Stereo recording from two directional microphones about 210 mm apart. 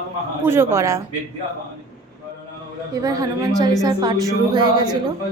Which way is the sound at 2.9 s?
15° right (ahead or behind).